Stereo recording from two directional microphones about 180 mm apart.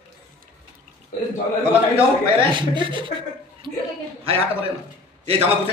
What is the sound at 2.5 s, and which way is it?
Speech, 25° right (ahead or behind).